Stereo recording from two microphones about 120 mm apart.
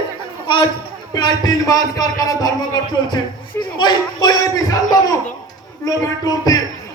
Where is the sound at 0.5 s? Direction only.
40° left (ahead or behind).